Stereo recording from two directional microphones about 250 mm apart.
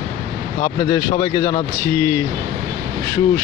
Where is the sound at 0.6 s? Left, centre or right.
Centre.